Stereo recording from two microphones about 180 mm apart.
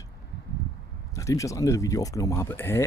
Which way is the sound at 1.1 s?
15° left (ahead or behind).